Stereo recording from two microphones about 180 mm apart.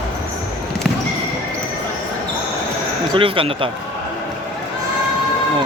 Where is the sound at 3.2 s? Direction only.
30° right (ahead or behind).